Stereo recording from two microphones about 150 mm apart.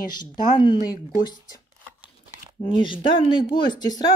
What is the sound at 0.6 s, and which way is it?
Speech, 30° left (ahead or behind).